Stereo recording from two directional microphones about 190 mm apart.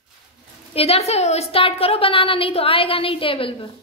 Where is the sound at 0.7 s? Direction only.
30° left (ahead or behind).